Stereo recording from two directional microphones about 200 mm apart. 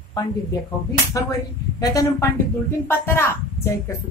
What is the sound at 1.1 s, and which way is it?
A woman's voice, 15° left (ahead or behind).